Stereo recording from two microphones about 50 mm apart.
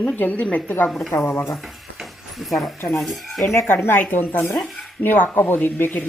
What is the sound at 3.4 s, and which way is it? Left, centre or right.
Speech, left.